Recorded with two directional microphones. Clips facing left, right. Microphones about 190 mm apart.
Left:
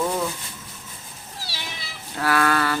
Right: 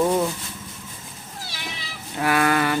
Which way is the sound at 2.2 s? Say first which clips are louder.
Right 1 dB; 15° right (ahead or behind).